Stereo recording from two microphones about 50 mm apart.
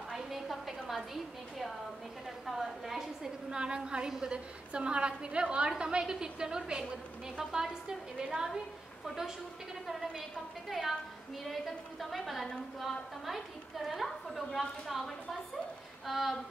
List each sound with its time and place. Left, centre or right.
0.1 s a woman's voice: centre
9.0 s a woman's voice: centre